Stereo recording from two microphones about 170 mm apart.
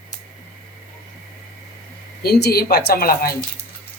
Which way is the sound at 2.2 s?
65° left (ahead or behind).